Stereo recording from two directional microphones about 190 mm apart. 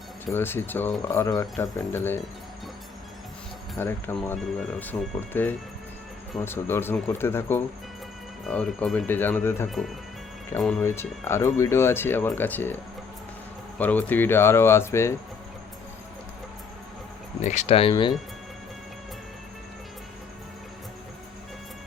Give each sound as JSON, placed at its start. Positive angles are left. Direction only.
{"t": 0.3, "sound": "speech", "side_deg": 10}
{"t": 3.8, "sound": "speech", "side_deg": 10}
{"t": 9.6, "sound": "speech", "side_deg": 0}
{"t": 11.3, "sound": "speech", "side_deg": 15}
{"t": 17.4, "sound": "speech", "side_deg": 40}